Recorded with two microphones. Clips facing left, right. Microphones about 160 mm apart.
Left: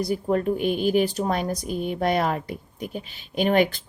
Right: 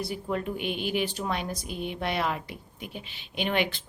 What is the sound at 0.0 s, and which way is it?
A woman's voice, 40° left (ahead or behind).